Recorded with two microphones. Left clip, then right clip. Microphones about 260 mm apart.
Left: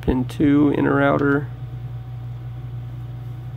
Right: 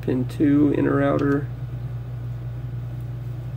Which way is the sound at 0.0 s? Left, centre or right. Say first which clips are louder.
Left 2 dB; centre.